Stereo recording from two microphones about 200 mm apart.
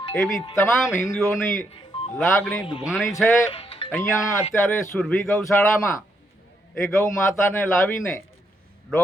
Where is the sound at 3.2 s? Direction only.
15° left (ahead or behind).